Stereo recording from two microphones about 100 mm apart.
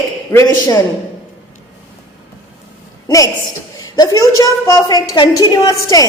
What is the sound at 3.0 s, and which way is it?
A woman's voice, 35° left (ahead or behind).